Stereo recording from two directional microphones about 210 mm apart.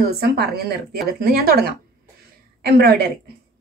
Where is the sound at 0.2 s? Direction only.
50° right (ahead or behind).